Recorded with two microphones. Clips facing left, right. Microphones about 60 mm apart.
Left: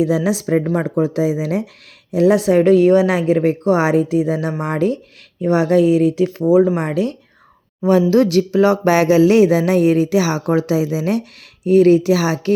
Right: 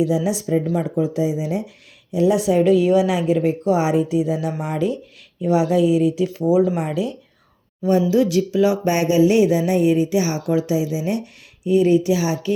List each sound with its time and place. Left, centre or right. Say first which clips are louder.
0.1 s speech: left 3 dB; left
1.0 s speech: left 3 dB; left
6.4 s speech: left 4 dB; left
6.8 s speech: left 4 dB; left
7.8 s speech: left 4 dB; left
8.1 s speech: left 4 dB; left
8.9 s speech: left 5 dB; left
10.4 s speech: left 3 dB; left